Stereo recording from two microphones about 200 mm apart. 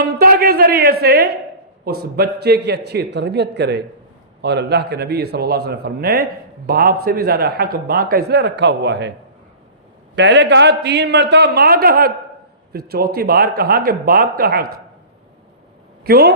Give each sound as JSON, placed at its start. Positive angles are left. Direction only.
{"t": 0.0, "sound": "a sound", "side_deg": -50}
{"t": 2.0, "sound": "a man's voice", "side_deg": -55}
{"t": 10.2, "sound": "a man's voice", "side_deg": -60}
{"t": 16.0, "sound": "a man's voice", "side_deg": -50}